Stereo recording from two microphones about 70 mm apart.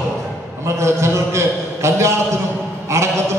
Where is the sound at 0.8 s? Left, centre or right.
Right.